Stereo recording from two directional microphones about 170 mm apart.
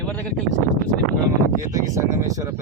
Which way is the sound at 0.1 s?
10° left (ahead or behind).